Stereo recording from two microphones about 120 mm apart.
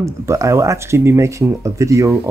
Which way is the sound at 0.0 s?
25° right (ahead or behind).